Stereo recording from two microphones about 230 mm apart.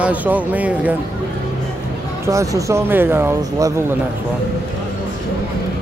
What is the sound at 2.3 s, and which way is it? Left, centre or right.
Speech, centre.